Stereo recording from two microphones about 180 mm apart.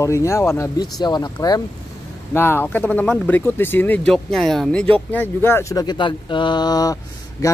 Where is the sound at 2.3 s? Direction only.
10° left (ahead or behind).